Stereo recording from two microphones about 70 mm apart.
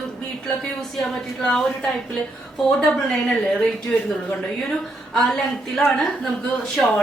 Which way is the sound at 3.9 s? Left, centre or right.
Centre.